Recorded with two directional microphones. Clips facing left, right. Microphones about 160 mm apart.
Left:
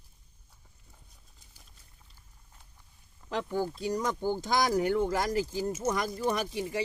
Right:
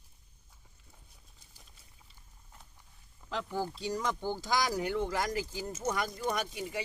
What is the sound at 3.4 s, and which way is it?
Speech, 50° left (ahead or behind).